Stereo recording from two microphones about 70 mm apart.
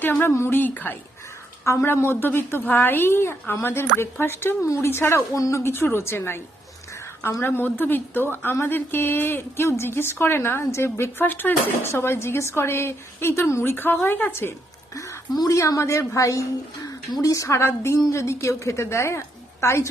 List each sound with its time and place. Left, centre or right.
0.2 s speech: left
1.6 s speech: left
5.4 s a woman's voice: left
7.4 s speech: left
15.4 s speech: left
17.6 s speech: left